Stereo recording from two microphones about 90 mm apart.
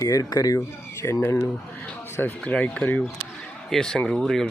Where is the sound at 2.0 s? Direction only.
30° left (ahead or behind).